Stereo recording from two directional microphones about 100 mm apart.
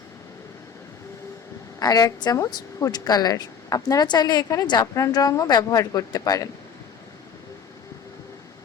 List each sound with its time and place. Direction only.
1.8 s speech: 40° left (ahead or behind)